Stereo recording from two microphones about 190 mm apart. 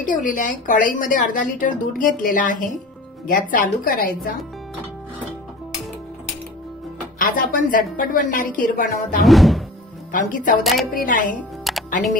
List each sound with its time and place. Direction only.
0.0 s speech: 45° left (ahead or behind)
7.2 s speech: 45° left (ahead or behind)
9.2 s music: centre (ahead or behind)
10.1 s speech: 45° left (ahead or behind)
10.6 s music: centre (ahead or behind)
10.9 s speech: 45° left (ahead or behind)
11.7 s music: centre (ahead or behind)